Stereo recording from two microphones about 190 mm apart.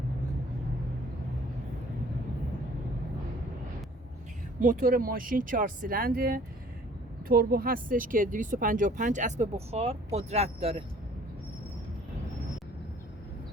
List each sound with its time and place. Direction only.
4.6 s speech: 45° right (ahead or behind)